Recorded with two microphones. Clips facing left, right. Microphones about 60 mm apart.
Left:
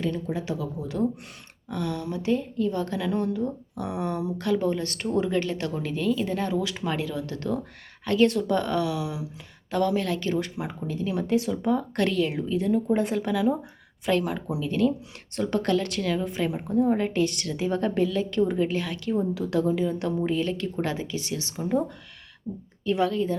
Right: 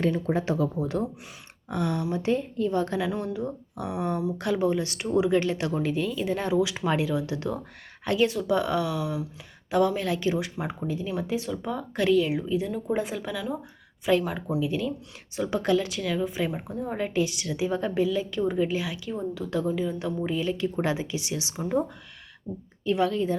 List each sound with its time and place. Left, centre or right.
0.3 s speech: right
1.7 s a woman's voice: right
3.0 s a woman's voice: centre
4.4 s speech: centre
5.4 s a woman's voice: right
8.2 s speech: centre
9.0 s speech: centre
9.6 s a woman's voice: centre
21.6 s a woman's voice: centre
22.9 s a woman's voice: centre